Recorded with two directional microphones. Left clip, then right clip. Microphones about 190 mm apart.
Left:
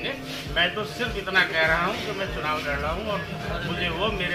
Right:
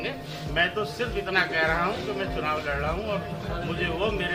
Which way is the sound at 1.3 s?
20° right (ahead or behind).